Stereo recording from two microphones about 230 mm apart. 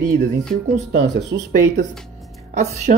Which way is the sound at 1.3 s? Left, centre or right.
Right.